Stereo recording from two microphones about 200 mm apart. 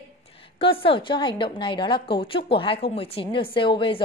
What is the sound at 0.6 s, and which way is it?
Speech, 25° left (ahead or behind).